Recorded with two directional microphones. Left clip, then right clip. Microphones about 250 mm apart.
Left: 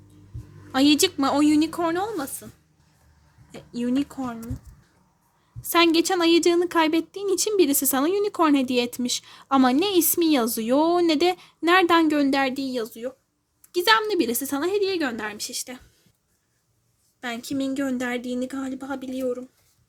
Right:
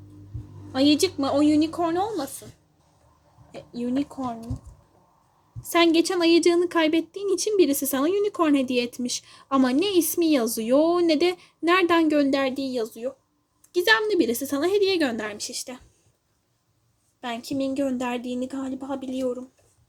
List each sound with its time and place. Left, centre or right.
0.7 s a woman's voice: centre
3.5 s a woman's voice: left
5.7 s a woman's voice: centre
17.2 s a woman's voice: centre